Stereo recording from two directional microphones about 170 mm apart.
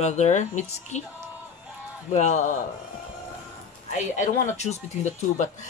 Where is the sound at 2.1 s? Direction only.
45° left (ahead or behind).